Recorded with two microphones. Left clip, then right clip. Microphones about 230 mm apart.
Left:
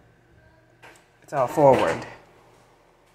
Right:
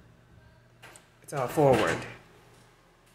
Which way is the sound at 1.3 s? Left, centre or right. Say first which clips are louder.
Left 7 dB; centre.